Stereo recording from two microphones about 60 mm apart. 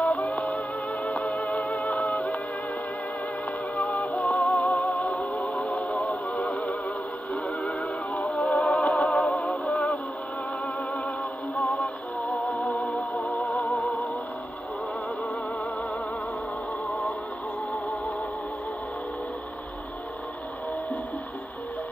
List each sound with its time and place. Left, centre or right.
0.1 s music: centre
1.7 s music: left
4.1 s music: left
6.0 s music: left
8.1 s music: centre
9.0 s music: left
11.6 s music: centre
13.2 s music: left